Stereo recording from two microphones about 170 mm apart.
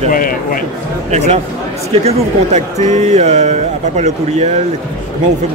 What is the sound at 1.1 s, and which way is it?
Speech, 40° right (ahead or behind).